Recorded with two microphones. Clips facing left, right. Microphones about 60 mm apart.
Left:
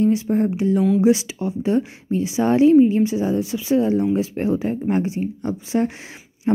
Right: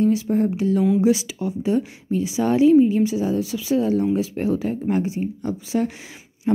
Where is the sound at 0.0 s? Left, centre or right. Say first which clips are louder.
Left 1 dB; left.